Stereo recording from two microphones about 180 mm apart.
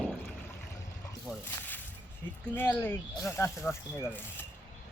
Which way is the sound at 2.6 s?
10° left (ahead or behind).